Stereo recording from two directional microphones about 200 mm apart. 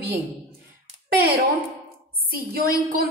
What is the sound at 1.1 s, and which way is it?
A child's voice, 55° right (ahead or behind).